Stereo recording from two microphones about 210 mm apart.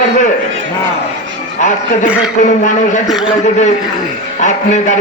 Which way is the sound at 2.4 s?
35° left (ahead or behind).